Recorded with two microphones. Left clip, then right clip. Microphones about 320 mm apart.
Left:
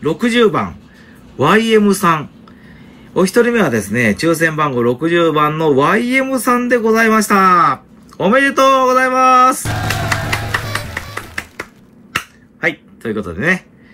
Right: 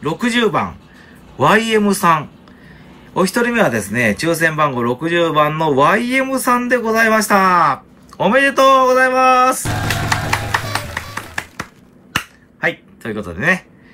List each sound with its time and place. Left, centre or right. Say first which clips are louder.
0.0 s a man's voice: left 4 dB; centre
12.6 s speech: left 2 dB; centre